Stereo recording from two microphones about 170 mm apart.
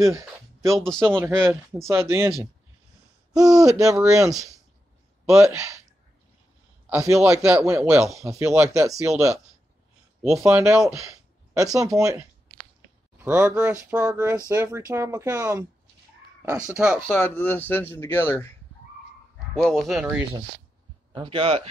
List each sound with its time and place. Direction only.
0.7 s speech: centre (ahead or behind)
1.1 s a man's voice: 15° right (ahead or behind)
3.3 s a man's voice: 20° right (ahead or behind)
6.9 s a man's voice: 15° right (ahead or behind)
10.2 s a man's voice: 5° right (ahead or behind)
13.2 s a man's voice: 10° right (ahead or behind)
17.1 s speech: 10° left (ahead or behind)
19.6 s speech: centre (ahead or behind)
21.1 s speech: 30° right (ahead or behind)